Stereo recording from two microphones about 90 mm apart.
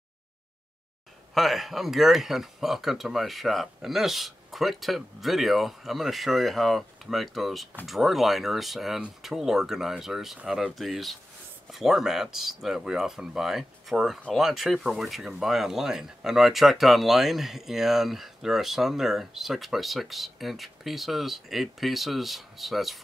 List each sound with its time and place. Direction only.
1.3 s speech: centre (ahead or behind)